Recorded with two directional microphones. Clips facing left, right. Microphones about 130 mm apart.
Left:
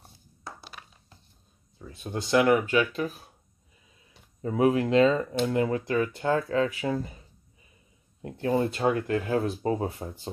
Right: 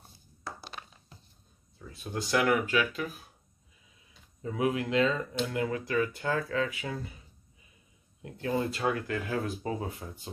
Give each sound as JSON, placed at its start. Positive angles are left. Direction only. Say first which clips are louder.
{"t": 1.8, "sound": "speech", "louder": "left 2 dB", "side_deg": 20}
{"t": 4.4, "sound": "speech", "louder": "left 6 dB", "side_deg": 40}
{"t": 8.2, "sound": "speech", "louder": "left 5 dB", "side_deg": 30}